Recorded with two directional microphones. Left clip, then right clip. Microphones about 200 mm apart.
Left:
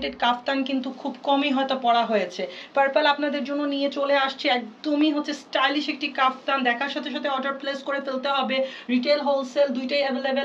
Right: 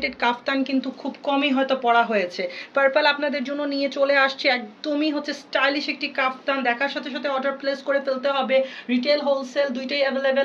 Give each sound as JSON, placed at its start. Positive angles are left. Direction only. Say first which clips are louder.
{"t": 0.0, "sound": "speech", "louder": "right 1 dB", "side_deg": -45}